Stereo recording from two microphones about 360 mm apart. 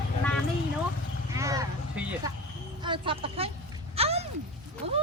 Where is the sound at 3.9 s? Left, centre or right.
Centre.